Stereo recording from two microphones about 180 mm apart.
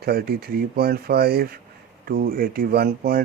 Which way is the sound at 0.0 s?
60° right (ahead or behind).